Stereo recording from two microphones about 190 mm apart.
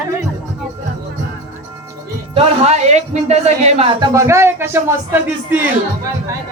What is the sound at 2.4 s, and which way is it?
A woman's voice, 35° right (ahead or behind).